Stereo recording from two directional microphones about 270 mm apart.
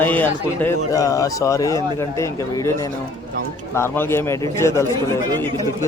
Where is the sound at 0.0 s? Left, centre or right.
Centre.